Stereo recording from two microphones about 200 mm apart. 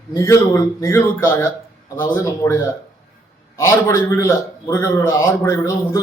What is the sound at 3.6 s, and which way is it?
A man's voice, 15° left (ahead or behind).